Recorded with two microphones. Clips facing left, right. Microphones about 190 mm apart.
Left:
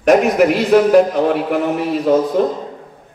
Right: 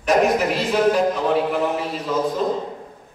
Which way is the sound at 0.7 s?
65° left (ahead or behind).